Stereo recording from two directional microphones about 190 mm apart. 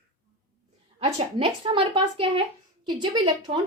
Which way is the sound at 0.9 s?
30° right (ahead or behind).